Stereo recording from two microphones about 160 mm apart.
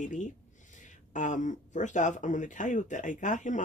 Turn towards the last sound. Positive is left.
turn(degrees=50)  # may be behind; listen again after turning